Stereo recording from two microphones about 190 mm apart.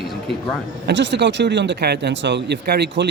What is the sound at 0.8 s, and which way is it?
Speech, 70° right (ahead or behind).